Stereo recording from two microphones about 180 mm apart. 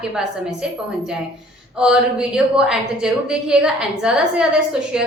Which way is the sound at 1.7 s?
5° right (ahead or behind).